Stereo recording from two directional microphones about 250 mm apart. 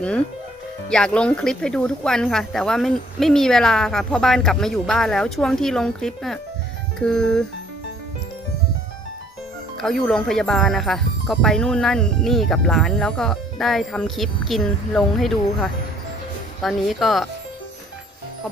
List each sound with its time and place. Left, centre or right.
0.0 s speech: centre
9.7 s speech: centre